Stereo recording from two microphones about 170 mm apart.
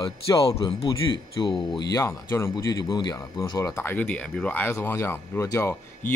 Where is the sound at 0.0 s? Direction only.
20° left (ahead or behind).